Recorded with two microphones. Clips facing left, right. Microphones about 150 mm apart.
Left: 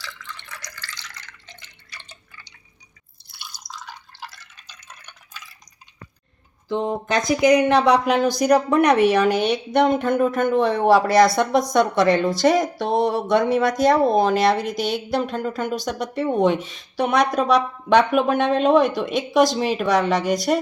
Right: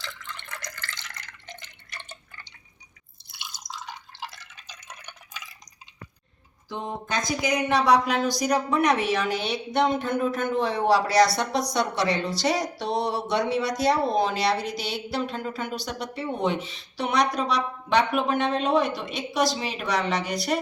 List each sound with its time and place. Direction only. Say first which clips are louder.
0.3 s drip: right 1 dB; 50° right (ahead or behind)
3.3 s drip: even; 20° right (ahead or behind)
6.7 s speech: left 9 dB; 75° left (ahead or behind); by 20.6 s 45° left (ahead or behind)